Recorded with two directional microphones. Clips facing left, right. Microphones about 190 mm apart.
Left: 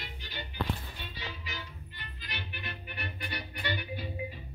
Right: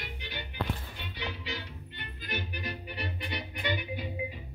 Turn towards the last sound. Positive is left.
turn(degrees=-15)  # may be behind; listen again after turning